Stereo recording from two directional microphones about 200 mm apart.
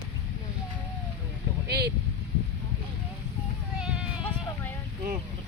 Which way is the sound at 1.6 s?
55° right (ahead or behind).